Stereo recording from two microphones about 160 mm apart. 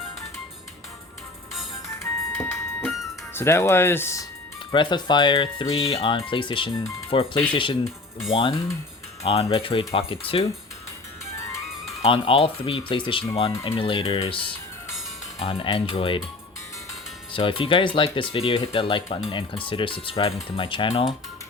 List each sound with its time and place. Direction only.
2.3 s music: 5° left (ahead or behind)
3.3 s speech: 15° left (ahead or behind)
4.7 s speech: 30° left (ahead or behind)
12.0 s speech: 35° left (ahead or behind)
17.3 s speech: 35° left (ahead or behind)